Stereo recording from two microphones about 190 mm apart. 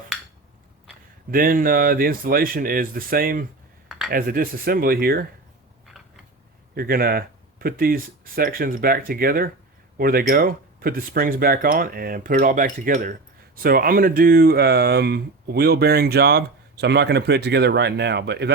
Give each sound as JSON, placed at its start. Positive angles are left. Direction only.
{"t": 1.3, "sound": "speech", "side_deg": -50}
{"t": 3.8, "sound": "a sound", "side_deg": 0}
{"t": 4.1, "sound": "speech", "side_deg": -50}
{"t": 6.7, "sound": "speech", "side_deg": -50}